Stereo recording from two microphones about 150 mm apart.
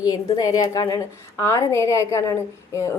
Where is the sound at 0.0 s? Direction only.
25° left (ahead or behind).